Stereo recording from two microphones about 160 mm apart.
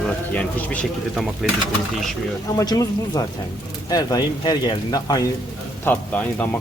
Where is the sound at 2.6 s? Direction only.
20° left (ahead or behind).